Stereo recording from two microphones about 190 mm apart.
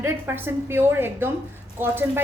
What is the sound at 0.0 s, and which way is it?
A woman's voice, 10° right (ahead or behind).